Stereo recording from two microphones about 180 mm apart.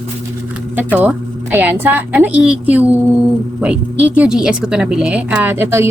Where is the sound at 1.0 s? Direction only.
10° right (ahead or behind).